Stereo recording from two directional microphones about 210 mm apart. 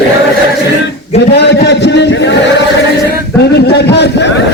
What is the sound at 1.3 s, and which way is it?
A man's voice, 55° left (ahead or behind).